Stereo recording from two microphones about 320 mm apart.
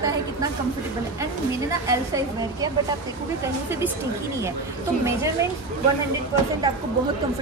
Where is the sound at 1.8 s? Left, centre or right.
Centre.